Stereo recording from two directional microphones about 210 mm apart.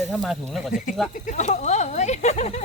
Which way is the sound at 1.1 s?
35° left (ahead or behind).